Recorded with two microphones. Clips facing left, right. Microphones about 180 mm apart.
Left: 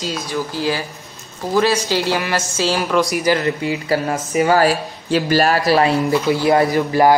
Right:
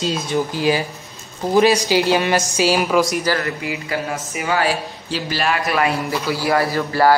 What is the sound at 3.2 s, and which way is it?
Speech, 20° left (ahead or behind).